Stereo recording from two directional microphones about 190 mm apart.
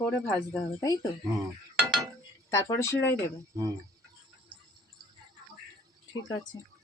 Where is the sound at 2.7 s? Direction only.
15° left (ahead or behind).